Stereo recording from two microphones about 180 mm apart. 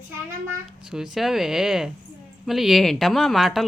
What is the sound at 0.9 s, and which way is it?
A woman's voice, centre (ahead or behind).